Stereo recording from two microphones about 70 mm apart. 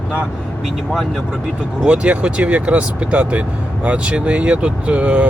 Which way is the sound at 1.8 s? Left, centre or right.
Centre.